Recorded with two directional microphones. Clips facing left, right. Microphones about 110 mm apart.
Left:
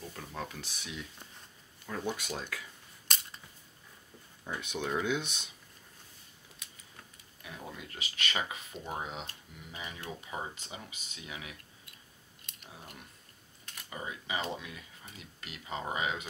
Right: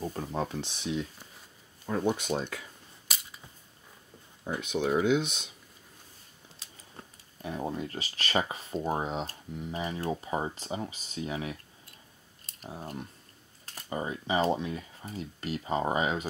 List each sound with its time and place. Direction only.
0.0 s speech: 35° right (ahead or behind)
3.1 s a sound: 5° right (ahead or behind)
4.5 s speech: 15° right (ahead or behind)
6.6 s speech: 35° right (ahead or behind)